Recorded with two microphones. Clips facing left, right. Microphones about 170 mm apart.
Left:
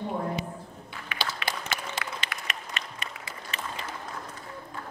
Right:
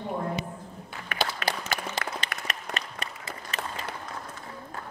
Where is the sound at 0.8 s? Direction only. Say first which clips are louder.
Right 4 dB; 45° right (ahead or behind).